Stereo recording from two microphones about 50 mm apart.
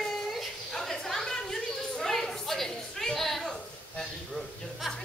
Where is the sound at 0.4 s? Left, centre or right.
Centre.